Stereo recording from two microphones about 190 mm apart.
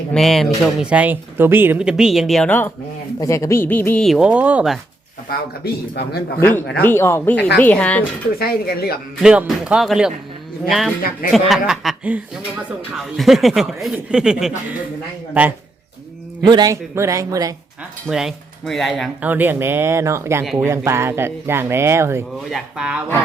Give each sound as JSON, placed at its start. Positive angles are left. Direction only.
{"t": 0.1, "sound": "speech", "side_deg": 0}
{"t": 5.9, "sound": "a man's voice", "side_deg": 55}
{"t": 6.8, "sound": "speech", "side_deg": 10}
{"t": 8.4, "sound": "speech", "side_deg": 55}
{"t": 9.2, "sound": "speech", "side_deg": -5}
{"t": 16.4, "sound": "speech", "side_deg": -20}
{"t": 18.1, "sound": "speech", "side_deg": -5}
{"t": 19.3, "sound": "speech", "side_deg": -10}
{"t": 20.4, "sound": "speech", "side_deg": 0}
{"t": 20.7, "sound": "speech", "side_deg": -15}
{"t": 22.4, "sound": "speech", "side_deg": 0}